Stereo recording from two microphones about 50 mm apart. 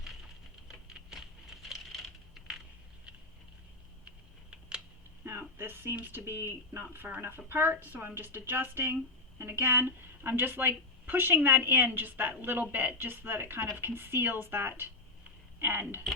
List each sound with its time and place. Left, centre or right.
0.7 s typing: centre
5.2 s speech: right